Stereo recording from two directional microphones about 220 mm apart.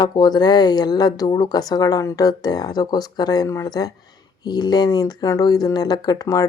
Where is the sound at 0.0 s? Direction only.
20° left (ahead or behind).